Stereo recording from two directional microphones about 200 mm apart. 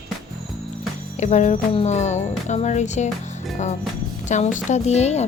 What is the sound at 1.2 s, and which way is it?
Speech, 35° left (ahead or behind).